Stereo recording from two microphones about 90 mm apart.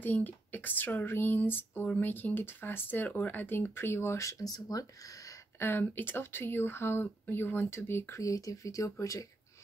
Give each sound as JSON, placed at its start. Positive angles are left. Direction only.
{"t": 0.0, "sound": "speech", "side_deg": 20}
{"t": 5.6, "sound": "speech", "side_deg": 25}
{"t": 8.2, "sound": "speech", "side_deg": 40}